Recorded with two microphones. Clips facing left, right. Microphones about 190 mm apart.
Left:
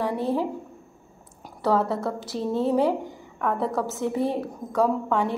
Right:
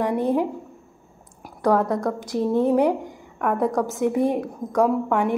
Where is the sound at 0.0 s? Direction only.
15° right (ahead or behind).